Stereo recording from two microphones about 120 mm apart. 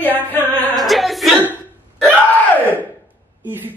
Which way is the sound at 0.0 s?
15° left (ahead or behind).